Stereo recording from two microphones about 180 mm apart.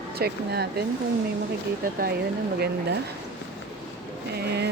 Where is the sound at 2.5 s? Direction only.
60° right (ahead or behind).